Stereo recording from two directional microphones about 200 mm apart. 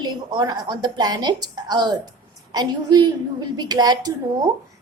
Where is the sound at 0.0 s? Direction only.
20° right (ahead or behind).